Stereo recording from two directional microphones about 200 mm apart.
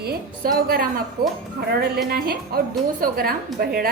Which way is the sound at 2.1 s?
50° right (ahead or behind).